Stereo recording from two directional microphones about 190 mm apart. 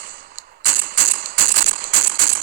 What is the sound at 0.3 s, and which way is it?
Cap gun, 50° right (ahead or behind).